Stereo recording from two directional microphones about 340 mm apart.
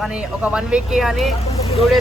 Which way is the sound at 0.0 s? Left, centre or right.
Centre.